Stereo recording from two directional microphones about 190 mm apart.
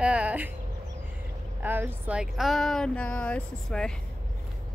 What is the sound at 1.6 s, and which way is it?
Speech, 10° right (ahead or behind).